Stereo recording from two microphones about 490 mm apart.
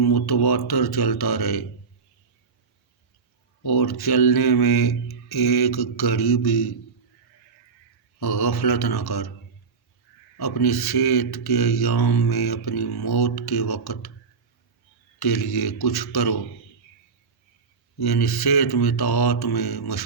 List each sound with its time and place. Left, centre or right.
0.0 s speech: left
3.7 s speech: left
8.2 s speech: left
10.3 s speech: left
15.2 s speech: left
18.0 s speech: left